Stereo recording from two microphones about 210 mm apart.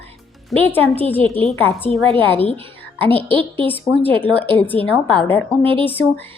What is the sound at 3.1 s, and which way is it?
Speech, 25° right (ahead or behind).